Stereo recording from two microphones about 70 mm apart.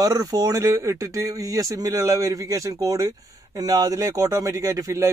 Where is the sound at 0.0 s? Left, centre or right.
Right.